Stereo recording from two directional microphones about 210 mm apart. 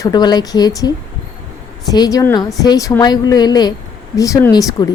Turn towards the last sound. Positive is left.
turn(degrees=15)  # may be behind; listen again after turning